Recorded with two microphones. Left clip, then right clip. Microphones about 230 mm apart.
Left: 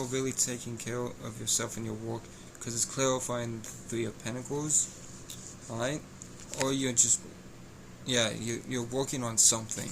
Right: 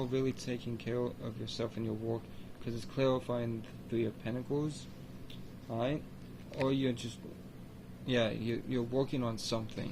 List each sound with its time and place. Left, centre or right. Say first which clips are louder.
0.0 s speech: left 3 dB; centre
5.7 s speech: left 2 dB; centre